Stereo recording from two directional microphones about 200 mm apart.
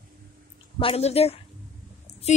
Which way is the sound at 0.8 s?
30° left (ahead or behind).